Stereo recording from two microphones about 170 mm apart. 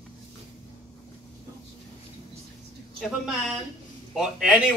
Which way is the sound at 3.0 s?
5° right (ahead or behind).